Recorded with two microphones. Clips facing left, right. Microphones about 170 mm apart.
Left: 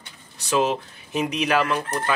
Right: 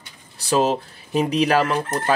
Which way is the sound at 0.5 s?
35° right (ahead or behind).